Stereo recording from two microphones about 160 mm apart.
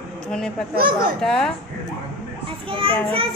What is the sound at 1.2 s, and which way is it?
Speech, 5° left (ahead or behind).